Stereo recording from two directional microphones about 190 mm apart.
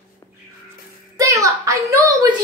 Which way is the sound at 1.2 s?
15° right (ahead or behind).